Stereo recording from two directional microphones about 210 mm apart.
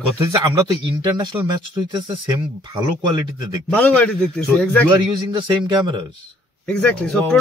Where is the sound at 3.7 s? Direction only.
5° left (ahead or behind).